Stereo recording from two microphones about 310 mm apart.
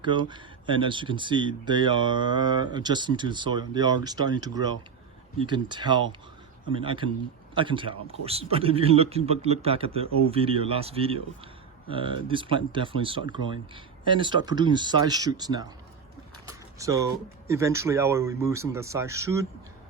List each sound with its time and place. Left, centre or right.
0.0 s a man's voice: centre
16.5 s a sound: centre
17.5 s speech: centre